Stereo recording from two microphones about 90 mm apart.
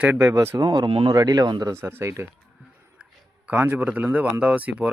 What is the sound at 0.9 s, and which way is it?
Speech, 90° right.